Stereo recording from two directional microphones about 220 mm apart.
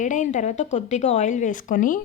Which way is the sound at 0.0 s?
35° left (ahead or behind).